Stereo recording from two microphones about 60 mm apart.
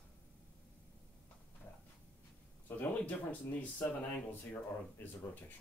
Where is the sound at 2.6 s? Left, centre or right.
Left.